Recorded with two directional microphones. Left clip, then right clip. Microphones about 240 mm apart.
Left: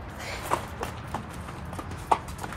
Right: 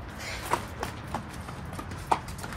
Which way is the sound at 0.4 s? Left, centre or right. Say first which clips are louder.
Left 1 dB; centre.